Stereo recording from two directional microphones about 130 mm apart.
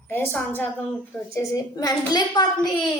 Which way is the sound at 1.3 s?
25° left (ahead or behind).